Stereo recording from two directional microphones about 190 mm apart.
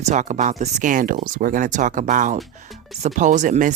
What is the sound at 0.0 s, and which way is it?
Speech, 35° right (ahead or behind).